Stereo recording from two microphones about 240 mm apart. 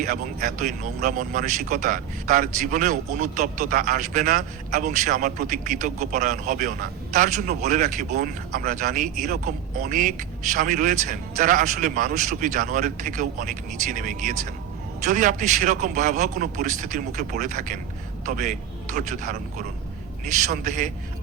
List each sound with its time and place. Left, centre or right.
0.0 s speech: right